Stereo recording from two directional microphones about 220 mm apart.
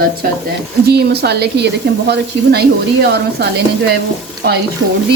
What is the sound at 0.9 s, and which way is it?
Speech, 45° right (ahead or behind).